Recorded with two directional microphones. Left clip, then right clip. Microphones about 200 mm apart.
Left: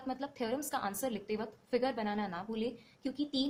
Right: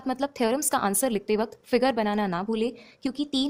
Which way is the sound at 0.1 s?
50° right (ahead or behind).